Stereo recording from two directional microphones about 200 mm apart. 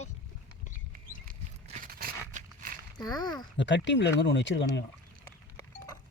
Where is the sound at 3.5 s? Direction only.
65° left (ahead or behind).